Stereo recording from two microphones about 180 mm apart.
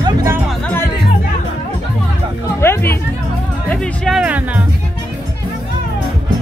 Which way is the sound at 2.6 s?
15° left (ahead or behind).